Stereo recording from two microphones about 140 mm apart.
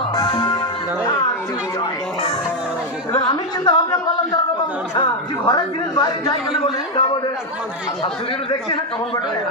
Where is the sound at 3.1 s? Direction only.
30° left (ahead or behind).